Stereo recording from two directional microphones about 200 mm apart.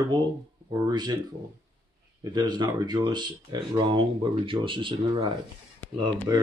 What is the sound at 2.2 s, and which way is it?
Speech, 20° right (ahead or behind).